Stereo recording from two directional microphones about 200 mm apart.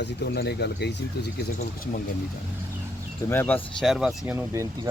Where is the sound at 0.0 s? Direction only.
60° left (ahead or behind).